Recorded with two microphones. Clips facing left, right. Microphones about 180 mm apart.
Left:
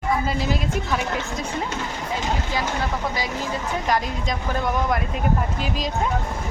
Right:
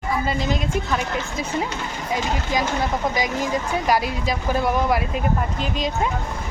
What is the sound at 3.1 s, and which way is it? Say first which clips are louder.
Speech: right 4 dB; 15° right (ahead or behind).